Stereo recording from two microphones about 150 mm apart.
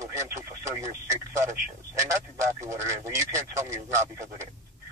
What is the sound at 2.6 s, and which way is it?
Speech, 20° right (ahead or behind).